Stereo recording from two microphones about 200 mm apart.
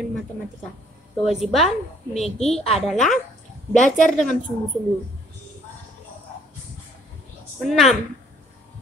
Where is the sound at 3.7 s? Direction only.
40° left (ahead or behind).